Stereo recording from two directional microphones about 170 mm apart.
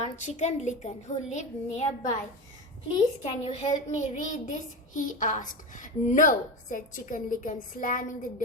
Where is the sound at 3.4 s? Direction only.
35° left (ahead or behind).